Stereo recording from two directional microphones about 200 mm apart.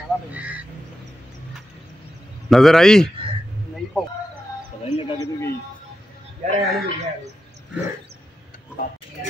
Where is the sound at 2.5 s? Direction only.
Centre (ahead or behind).